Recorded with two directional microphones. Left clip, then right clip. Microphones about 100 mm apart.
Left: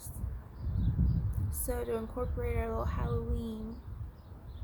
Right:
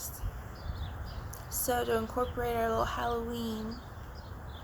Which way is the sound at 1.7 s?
30° left (ahead or behind).